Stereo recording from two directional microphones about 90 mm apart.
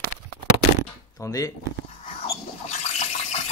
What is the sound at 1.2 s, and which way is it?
Speech, 35° left (ahead or behind).